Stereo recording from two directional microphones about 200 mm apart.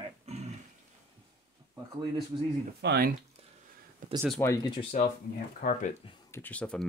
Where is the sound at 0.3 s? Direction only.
35° right (ahead or behind).